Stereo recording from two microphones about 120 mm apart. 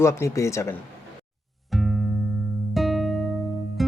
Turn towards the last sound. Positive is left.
turn(degrees=0)  # may be behind; listen again after turning